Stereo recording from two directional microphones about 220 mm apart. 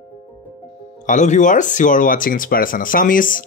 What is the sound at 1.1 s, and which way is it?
Speech, 35° left (ahead or behind).